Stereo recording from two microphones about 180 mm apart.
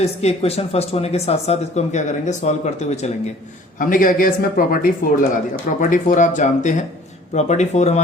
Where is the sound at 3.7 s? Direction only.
50° left (ahead or behind).